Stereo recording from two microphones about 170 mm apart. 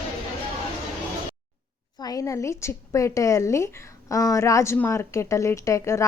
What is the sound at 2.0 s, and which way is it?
A woman's voice, 20° left (ahead or behind).